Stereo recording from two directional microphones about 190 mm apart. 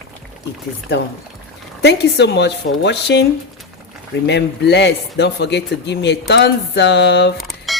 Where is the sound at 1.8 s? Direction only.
60° left (ahead or behind).